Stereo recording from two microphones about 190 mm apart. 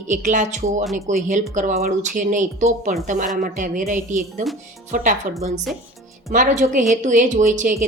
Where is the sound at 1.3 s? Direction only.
40° right (ahead or behind).